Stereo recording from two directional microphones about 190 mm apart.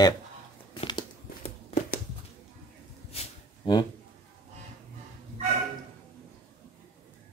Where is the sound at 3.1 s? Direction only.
25° left (ahead or behind).